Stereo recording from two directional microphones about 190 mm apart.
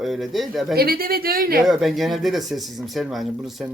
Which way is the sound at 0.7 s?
50° right (ahead or behind).